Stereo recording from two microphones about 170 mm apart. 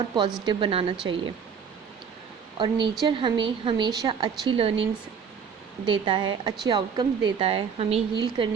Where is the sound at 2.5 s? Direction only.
30° right (ahead or behind).